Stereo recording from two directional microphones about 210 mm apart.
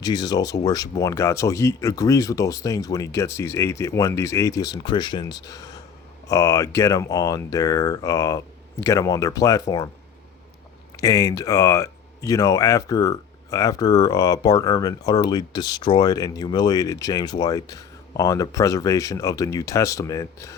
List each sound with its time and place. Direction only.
0.0 s speech: 20° left (ahead or behind)
10.9 s speech: 15° left (ahead or behind)